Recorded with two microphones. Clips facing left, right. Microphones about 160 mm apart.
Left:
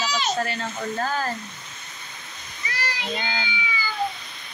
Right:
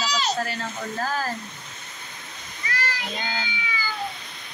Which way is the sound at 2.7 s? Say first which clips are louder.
Even; 15° left (ahead or behind).